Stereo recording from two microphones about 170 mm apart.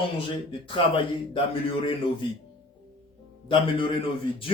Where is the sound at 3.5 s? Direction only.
30° left (ahead or behind).